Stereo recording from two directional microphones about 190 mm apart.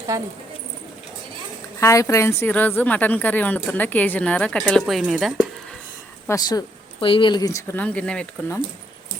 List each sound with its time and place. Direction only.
0.1 s speech: 15° right (ahead or behind)
1.8 s a woman's voice: 15° left (ahead or behind)
6.2 s a woman's voice: 20° left (ahead or behind)